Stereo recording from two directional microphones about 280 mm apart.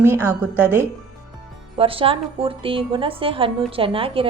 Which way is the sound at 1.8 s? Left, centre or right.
Centre.